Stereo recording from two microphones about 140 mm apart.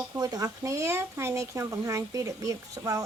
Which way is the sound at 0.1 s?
25° right (ahead or behind).